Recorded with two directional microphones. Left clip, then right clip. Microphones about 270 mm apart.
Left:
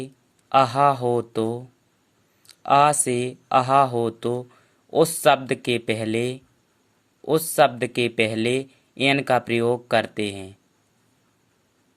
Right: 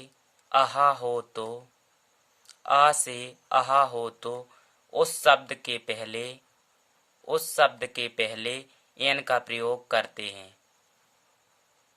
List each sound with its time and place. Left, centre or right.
0.0 s speech: centre